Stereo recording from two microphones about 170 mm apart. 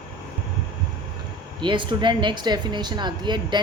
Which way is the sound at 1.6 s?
30° right (ahead or behind).